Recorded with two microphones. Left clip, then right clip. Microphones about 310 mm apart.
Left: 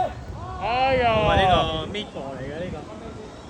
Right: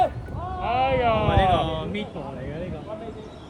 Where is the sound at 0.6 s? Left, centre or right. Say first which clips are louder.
Left 1 dB; left.